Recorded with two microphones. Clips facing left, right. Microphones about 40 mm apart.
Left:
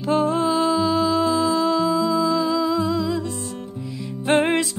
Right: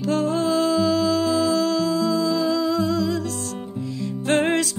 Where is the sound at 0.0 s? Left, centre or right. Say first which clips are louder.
Left 2 dB; left.